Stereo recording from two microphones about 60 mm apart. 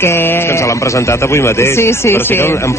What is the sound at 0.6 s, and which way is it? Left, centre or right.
A man's voice, left.